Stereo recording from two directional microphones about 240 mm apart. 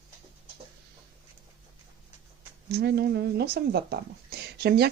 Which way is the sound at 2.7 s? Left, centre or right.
Right.